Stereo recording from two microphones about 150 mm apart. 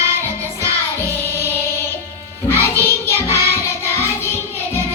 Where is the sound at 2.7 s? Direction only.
15° left (ahead or behind).